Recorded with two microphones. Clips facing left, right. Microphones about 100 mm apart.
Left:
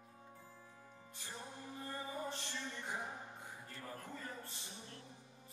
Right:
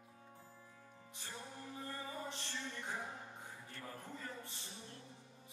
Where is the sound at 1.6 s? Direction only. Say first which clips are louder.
Left 1 dB; 15° left (ahead or behind).